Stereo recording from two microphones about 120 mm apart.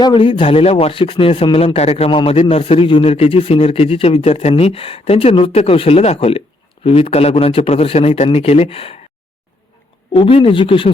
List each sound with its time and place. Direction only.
0.0 s a man's voice: 45° left (ahead or behind); by 2.0 s 60° left (ahead or behind)
2.0 s a man's voice: 50° left (ahead or behind)
10.1 s speech: 45° left (ahead or behind)